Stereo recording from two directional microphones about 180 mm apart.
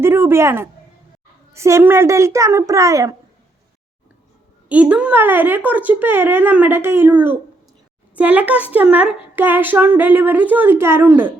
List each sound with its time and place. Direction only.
0.0 s a sound: 15° right (ahead or behind)
1.5 s a woman's voice: 15° right (ahead or behind)
4.7 s a woman's voice: 10° right (ahead or behind)